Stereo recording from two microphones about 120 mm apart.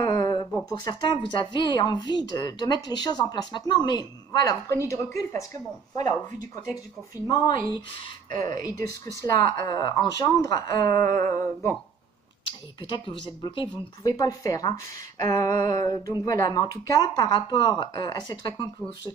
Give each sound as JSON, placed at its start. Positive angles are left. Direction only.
{"t": 0.0, "sound": "a sound", "side_deg": 30}
{"t": 0.7, "sound": "speech", "side_deg": 35}
{"t": 12.4, "sound": "speech", "side_deg": 45}